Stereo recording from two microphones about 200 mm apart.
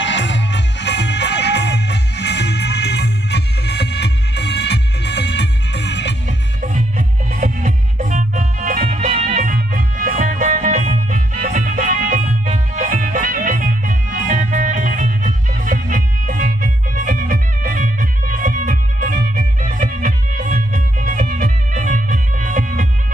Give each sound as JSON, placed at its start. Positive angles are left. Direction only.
{"t": 0.0, "sound": "music", "side_deg": 65}
{"t": 6.6, "sound": "music", "side_deg": -40}